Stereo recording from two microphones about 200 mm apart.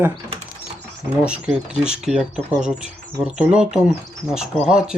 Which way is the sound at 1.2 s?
5° right (ahead or behind).